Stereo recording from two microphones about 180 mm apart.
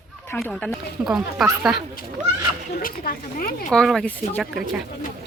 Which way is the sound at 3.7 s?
Centre (ahead or behind).